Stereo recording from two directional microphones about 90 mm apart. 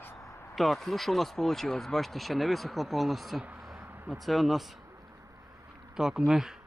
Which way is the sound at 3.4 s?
10° right (ahead or behind).